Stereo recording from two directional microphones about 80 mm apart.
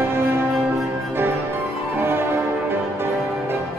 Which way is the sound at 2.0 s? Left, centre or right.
Right.